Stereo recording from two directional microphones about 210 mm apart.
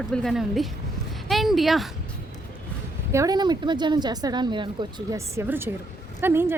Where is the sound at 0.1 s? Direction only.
Centre (ahead or behind).